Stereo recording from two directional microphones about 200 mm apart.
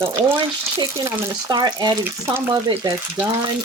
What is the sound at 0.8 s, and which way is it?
Speech, 20° right (ahead or behind).